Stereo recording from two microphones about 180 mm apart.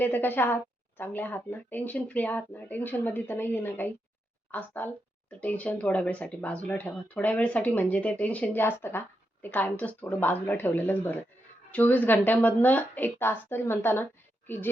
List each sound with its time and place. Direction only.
0.0 s speech: 10° left (ahead or behind)